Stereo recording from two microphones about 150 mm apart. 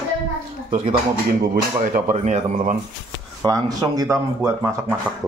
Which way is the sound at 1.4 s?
70° right (ahead or behind).